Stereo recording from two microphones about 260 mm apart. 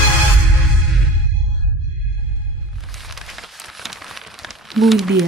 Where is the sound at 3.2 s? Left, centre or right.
Centre.